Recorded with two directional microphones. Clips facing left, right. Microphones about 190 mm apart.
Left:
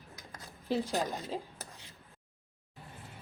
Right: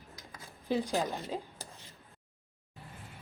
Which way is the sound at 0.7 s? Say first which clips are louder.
Right 1 dB; centre (ahead or behind).